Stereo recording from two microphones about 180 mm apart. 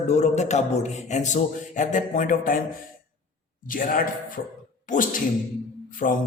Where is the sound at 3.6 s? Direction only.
50° left (ahead or behind).